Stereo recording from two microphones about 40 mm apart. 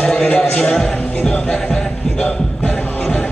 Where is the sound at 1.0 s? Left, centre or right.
Left.